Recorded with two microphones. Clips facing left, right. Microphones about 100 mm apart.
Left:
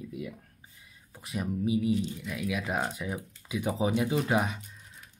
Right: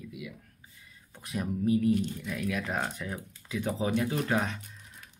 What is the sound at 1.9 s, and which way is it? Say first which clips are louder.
Speech: right 1 dB; 55° right (ahead or behind).